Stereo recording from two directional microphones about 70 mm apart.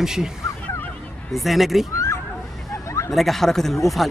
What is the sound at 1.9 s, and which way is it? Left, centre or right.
Neigh, left.